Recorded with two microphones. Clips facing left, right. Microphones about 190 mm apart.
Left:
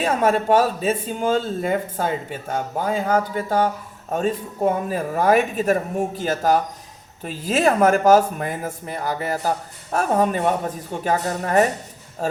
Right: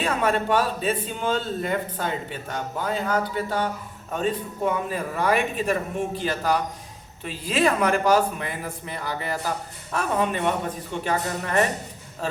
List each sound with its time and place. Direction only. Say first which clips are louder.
0.0 s speech: left 4 dB; 45° left (ahead or behind)